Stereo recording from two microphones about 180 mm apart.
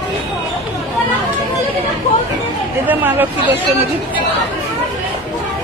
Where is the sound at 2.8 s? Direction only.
10° right (ahead or behind).